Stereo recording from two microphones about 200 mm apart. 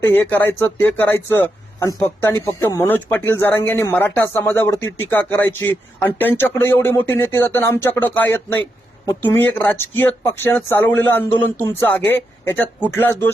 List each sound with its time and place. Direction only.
0.0 s speech: 10° left (ahead or behind)